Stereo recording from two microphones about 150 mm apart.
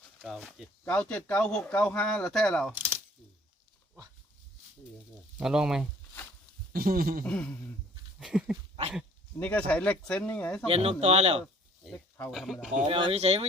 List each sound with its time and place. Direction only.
0.2 s speech: 5° left (ahead or behind)
2.7 s coin: 15° right (ahead or behind)
5.4 s speech: 5° right (ahead or behind)
6.7 s speech: 80° right
7.3 s speech: 5° left (ahead or behind)
8.2 s speech: 5° right (ahead or behind)
9.4 s speech: 10° left (ahead or behind)
10.7 s speech: 40° right (ahead or behind)
12.3 s speech: centre (ahead or behind)
12.8 s speech: 40° right (ahead or behind)